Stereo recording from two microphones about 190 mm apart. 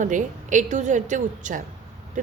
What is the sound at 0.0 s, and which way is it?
A woman's voice, 40° right (ahead or behind).